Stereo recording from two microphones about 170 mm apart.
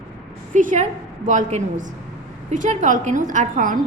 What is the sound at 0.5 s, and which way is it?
A woman's voice, 45° right (ahead or behind).